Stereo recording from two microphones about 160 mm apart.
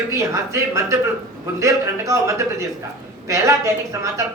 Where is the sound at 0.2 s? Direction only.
20° right (ahead or behind).